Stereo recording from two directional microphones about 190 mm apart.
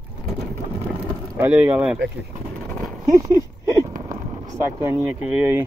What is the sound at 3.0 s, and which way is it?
Speech, 15° right (ahead or behind).